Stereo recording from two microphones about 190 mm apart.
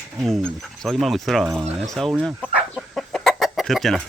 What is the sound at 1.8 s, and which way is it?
Chicken, centre (ahead or behind).